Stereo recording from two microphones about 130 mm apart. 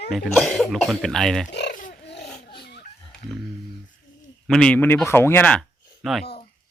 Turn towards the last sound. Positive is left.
turn(degrees=0)  # may be behind; listen again after turning